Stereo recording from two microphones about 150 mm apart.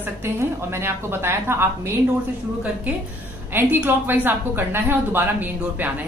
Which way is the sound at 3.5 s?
15° right (ahead or behind).